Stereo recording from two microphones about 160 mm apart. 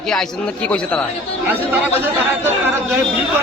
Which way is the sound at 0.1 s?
5° left (ahead or behind).